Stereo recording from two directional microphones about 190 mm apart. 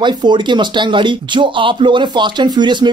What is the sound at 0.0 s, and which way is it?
Speech, 25° right (ahead or behind).